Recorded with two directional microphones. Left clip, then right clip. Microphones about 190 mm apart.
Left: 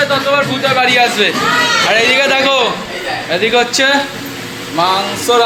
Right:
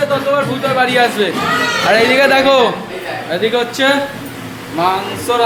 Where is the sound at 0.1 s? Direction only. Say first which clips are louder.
Left 2 dB; 15° right (ahead or behind).